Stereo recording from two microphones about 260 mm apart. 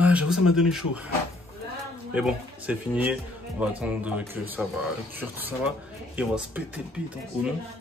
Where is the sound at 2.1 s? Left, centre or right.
Centre.